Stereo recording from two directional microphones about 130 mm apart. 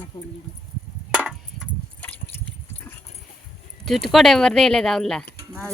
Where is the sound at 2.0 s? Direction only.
10° left (ahead or behind).